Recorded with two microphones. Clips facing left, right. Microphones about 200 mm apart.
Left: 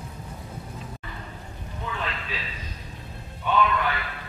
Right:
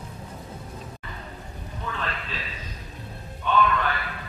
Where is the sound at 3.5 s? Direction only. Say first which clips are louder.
Right 1 dB; 10° left (ahead or behind).